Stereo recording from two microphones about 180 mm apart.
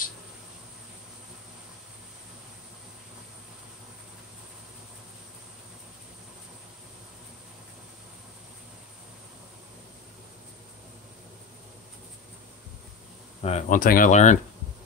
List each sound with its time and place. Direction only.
13.4 s speech: 35° left (ahead or behind)